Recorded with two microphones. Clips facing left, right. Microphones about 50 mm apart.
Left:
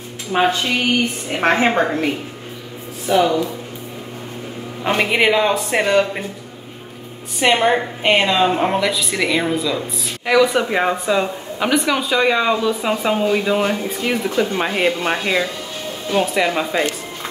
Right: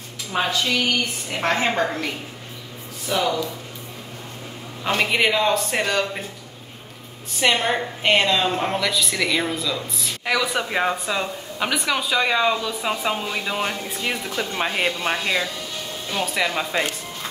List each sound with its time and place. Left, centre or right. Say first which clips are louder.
0.3 s speech: left 5 dB; left
4.8 s speech: left 4 dB; centre
7.3 s speech: left 5 dB; centre
10.2 s speech: left 8 dB; centre
14.1 s speech: left 7 dB; centre